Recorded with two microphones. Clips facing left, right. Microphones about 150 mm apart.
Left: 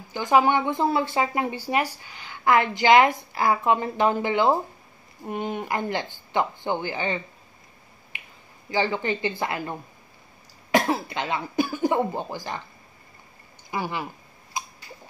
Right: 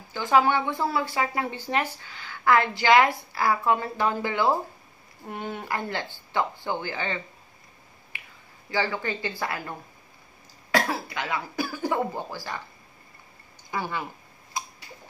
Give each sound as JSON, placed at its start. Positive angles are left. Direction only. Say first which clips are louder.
{"t": 0.1, "sound": "speech", "louder": "left 2 dB", "side_deg": 15}
{"t": 8.1, "sound": "finger snapping", "louder": "left 1 dB", "side_deg": 20}
{"t": 8.6, "sound": "speech", "louder": "left 3 dB", "side_deg": 20}
{"t": 13.7, "sound": "speech", "louder": "left 1 dB", "side_deg": 15}